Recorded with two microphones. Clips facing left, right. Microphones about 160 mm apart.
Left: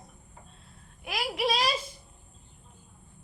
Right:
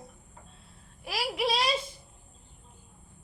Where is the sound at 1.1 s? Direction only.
30° right (ahead or behind).